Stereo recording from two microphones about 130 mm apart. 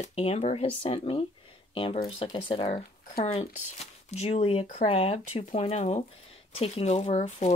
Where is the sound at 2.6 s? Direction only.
60° left (ahead or behind).